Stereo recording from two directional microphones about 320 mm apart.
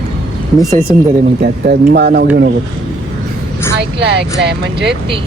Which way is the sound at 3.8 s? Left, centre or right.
Right.